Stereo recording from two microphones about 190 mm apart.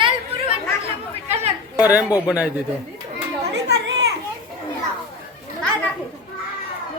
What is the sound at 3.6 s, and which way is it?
Children playing, 65° right (ahead or behind).